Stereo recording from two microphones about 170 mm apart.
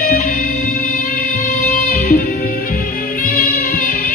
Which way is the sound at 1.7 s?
55° left (ahead or behind).